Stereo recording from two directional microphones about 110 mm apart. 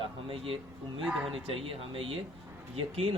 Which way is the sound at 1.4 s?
55° right (ahead or behind).